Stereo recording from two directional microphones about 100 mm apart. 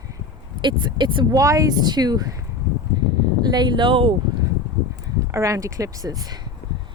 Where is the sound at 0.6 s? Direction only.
50° right (ahead or behind).